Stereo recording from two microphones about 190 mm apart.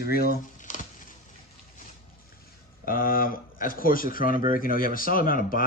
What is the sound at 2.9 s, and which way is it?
Speech, 50° left (ahead or behind).